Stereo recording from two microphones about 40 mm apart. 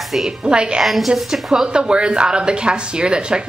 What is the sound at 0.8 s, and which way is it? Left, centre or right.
A man's voice, centre.